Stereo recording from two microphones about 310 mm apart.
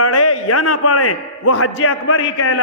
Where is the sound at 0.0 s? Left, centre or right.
Left.